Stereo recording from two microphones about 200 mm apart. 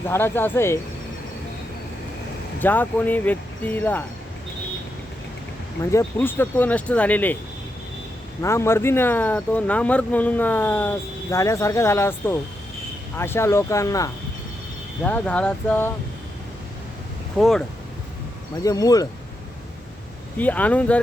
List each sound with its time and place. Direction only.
0.1 s speech: 10° left (ahead or behind)
2.6 s speech: 10° left (ahead or behind)
5.8 s speech: 15° left (ahead or behind)
8.4 s speech: 15° left (ahead or behind)
17.3 s speech: centre (ahead or behind)
18.6 s speech: 15° left (ahead or behind)
20.4 s speech: 10° left (ahead or behind)